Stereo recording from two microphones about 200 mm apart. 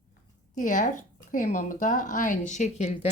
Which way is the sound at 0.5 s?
40° left (ahead or behind).